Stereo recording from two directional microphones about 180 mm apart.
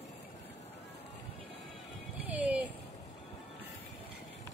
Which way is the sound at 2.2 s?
10° right (ahead or behind).